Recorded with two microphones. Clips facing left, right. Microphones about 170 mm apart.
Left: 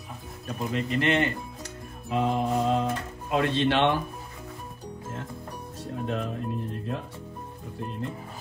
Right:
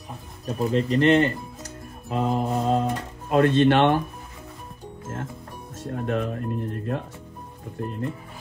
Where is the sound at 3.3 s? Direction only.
55° right (ahead or behind).